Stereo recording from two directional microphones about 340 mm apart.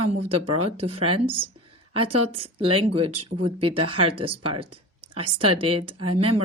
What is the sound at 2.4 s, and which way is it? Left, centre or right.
Speech, centre.